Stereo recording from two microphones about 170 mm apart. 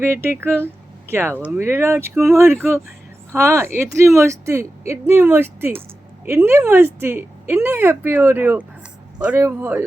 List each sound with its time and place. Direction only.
0.0 s speech: 15° right (ahead or behind)